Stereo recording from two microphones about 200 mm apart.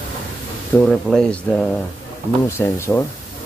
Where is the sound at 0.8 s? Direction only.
5° left (ahead or behind).